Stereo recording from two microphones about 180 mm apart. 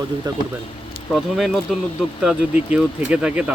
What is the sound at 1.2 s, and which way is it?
Speech, centre (ahead or behind).